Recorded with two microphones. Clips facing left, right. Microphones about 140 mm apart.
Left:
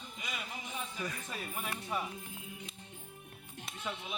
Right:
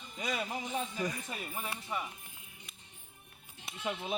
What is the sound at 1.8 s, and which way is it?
Speech, centre (ahead or behind).